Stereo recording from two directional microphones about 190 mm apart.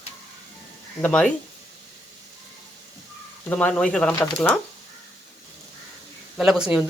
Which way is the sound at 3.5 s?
5° left (ahead or behind).